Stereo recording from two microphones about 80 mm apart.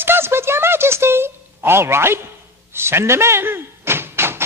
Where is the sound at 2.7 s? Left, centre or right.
Right.